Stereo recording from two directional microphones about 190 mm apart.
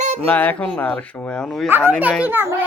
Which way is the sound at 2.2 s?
10° right (ahead or behind).